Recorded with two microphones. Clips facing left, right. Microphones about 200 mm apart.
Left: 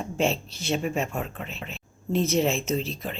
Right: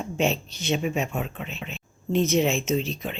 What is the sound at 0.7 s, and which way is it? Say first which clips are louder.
A woman's voice: right 1 dB; centre (ahead or behind).